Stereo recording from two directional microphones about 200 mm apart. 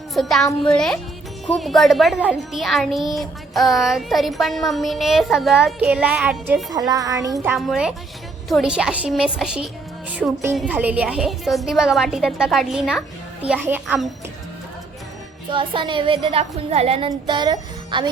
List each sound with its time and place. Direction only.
0.1 s a child's voice: centre (ahead or behind)
6.7 s speech: 20° right (ahead or behind)
7.5 s a child's voice: centre (ahead or behind)
15.4 s a woman's voice: 25° right (ahead or behind)